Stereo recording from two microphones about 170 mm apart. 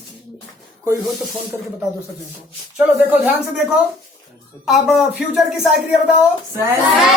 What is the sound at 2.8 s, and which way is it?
Child singing, 10° right (ahead or behind).